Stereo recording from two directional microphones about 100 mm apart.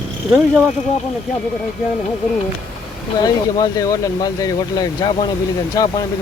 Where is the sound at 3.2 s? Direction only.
40° left (ahead or behind).